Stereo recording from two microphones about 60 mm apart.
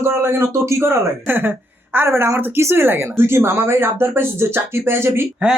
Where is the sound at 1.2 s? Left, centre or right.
Right.